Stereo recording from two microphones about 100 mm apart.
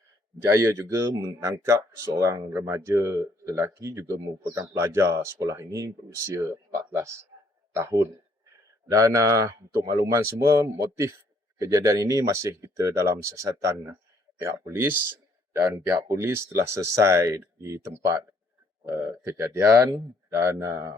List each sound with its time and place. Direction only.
0.3 s speech: 30° right (ahead or behind)
14.7 s speech: 20° right (ahead or behind)